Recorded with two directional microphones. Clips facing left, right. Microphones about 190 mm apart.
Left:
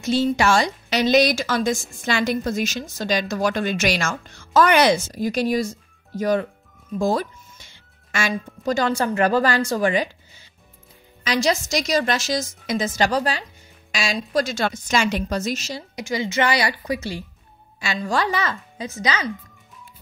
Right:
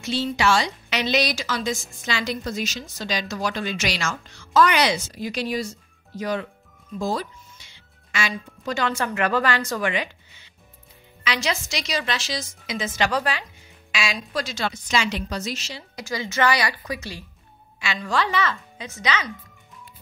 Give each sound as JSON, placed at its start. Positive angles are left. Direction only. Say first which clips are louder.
{"t": 0.0, "sound": "a woman's voice", "louder": "left 4 dB", "side_deg": 45}
{"t": 16.0, "sound": "speech", "louder": "left 2 dB", "side_deg": 20}